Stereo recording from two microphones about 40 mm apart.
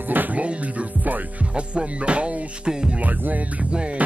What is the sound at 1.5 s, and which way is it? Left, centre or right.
Music, right.